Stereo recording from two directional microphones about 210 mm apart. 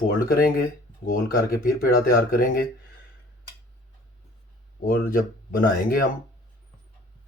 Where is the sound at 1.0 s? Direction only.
45° left (ahead or behind).